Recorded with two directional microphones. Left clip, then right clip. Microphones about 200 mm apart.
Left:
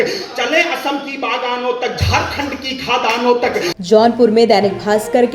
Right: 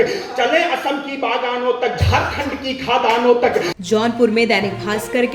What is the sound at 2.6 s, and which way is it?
Speech, 35° left (ahead or behind).